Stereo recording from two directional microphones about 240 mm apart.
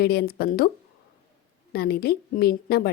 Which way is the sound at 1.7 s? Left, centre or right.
Left.